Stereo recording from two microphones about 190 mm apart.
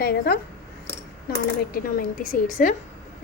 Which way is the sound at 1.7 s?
45° left (ahead or behind).